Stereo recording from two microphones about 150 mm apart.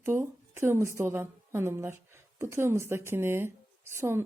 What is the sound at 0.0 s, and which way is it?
A woman's voice, 15° right (ahead or behind).